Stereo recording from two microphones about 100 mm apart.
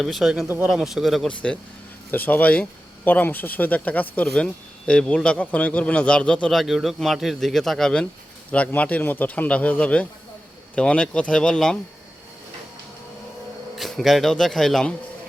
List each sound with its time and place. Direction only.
0.0 s a man's voice: centre (ahead or behind)
0.4 s speech: 20° right (ahead or behind)
0.7 s a man's voice: 5° right (ahead or behind)
1.3 s speech: 10° left (ahead or behind)
6.5 s a man's voice: centre (ahead or behind)
13.7 s a man's voice: centre (ahead or behind)